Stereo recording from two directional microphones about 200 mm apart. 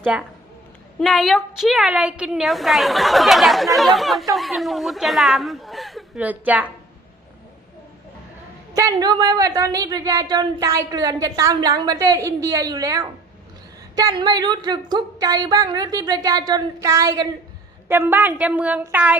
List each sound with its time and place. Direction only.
0.0 s a woman's voice: 5° right (ahead or behind)
8.7 s a woman's voice: 15° right (ahead or behind)